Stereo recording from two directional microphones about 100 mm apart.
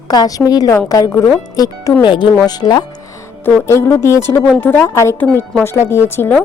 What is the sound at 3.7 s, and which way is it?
A woman's voice, 25° left (ahead or behind).